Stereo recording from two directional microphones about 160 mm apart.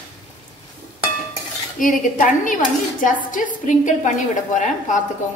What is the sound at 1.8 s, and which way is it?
A woman's voice, 55° left (ahead or behind).